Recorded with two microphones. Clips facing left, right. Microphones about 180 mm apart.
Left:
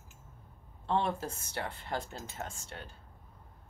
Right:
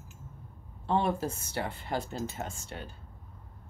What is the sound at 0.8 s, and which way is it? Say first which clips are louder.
Speech: right 3 dB; 5° right (ahead or behind).